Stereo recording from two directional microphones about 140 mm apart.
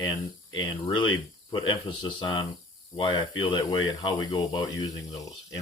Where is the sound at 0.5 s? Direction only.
35° left (ahead or behind).